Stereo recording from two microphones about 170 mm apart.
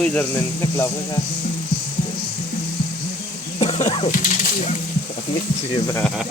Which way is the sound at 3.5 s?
40° left (ahead or behind).